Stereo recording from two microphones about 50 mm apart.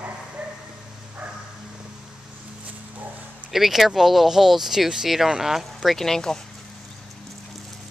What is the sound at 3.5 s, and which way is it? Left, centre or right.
Speech, centre.